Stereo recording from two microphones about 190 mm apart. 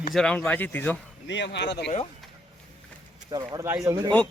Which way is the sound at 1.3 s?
65° left (ahead or behind).